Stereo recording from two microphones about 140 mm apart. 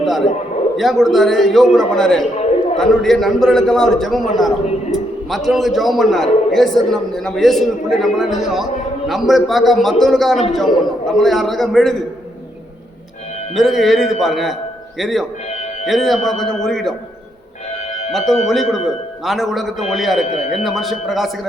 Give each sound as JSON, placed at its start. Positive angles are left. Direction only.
{"t": 0.0, "sound": "a man's voice", "side_deg": 0}
{"t": 13.6, "sound": "a man's voice", "side_deg": 0}
{"t": 18.4, "sound": "a man's voice", "side_deg": 0}
{"t": 20.2, "sound": "speech", "side_deg": 50}
{"t": 20.7, "sound": "a man's voice", "side_deg": 0}